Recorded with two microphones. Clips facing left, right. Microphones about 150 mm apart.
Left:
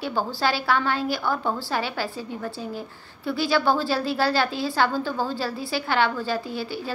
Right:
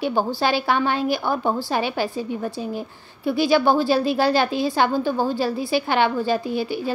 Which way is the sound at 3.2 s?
15° right (ahead or behind).